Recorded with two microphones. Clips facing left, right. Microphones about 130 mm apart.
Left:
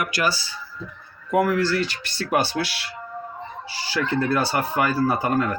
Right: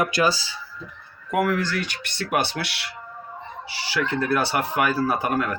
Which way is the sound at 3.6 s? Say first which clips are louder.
Even; 70° right (ahead or behind).